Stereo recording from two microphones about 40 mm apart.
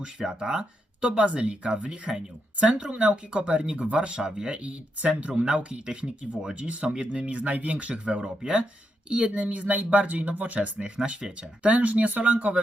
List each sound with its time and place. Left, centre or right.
0.0 s speech: right
2.6 s speech: right
8.2 s speech: right
9.2 s speech: right